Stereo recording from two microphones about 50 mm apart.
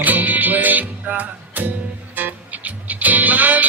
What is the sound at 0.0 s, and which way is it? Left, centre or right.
Music, right.